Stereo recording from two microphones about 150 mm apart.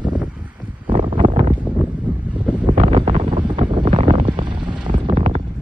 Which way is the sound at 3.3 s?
35° right (ahead or behind).